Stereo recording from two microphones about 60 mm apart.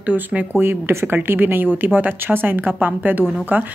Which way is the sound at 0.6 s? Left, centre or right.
Right.